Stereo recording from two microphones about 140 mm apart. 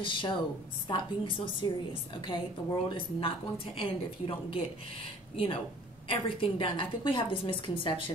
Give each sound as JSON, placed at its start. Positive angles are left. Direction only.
{"t": 0.0, "sound": "a woman's voice", "side_deg": 35}